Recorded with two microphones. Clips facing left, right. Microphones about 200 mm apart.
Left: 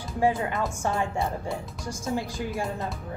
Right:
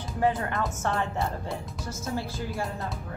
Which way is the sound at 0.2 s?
10° left (ahead or behind).